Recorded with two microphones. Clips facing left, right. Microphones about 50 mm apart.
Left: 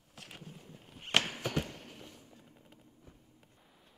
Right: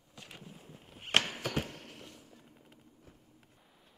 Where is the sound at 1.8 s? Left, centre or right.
Right.